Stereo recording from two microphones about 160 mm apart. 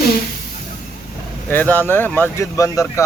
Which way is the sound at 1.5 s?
10° left (ahead or behind).